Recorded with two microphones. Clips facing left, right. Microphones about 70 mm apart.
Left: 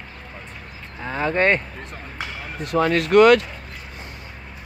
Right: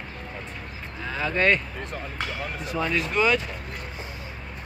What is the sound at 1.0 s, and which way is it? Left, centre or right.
Speech, left.